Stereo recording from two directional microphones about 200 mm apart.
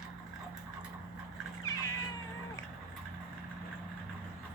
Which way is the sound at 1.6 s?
15° left (ahead or behind).